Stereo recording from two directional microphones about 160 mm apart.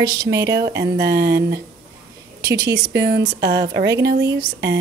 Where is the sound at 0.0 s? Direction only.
25° right (ahead or behind).